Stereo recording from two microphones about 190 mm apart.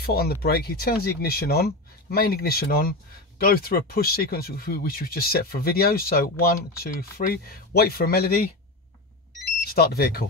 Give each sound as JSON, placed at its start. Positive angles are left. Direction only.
{"t": 0.0, "sound": "speech", "side_deg": 55}
{"t": 9.8, "sound": "speech", "side_deg": 55}